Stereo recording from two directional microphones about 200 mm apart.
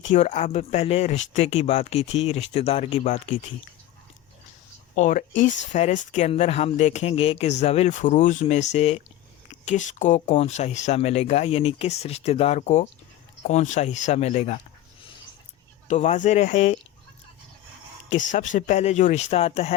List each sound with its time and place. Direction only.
0.1 s speech: 35° left (ahead or behind)
4.9 s speech: 40° left (ahead or behind)
15.9 s speech: 35° left (ahead or behind)
18.1 s speech: 40° left (ahead or behind)